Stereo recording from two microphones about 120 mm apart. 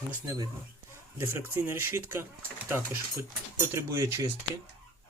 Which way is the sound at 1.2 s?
20° right (ahead or behind).